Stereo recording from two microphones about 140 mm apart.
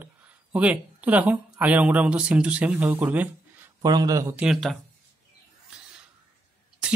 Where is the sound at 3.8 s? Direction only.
30° right (ahead or behind).